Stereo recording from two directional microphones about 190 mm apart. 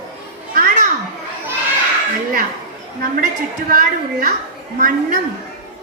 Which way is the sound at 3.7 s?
45° right (ahead or behind).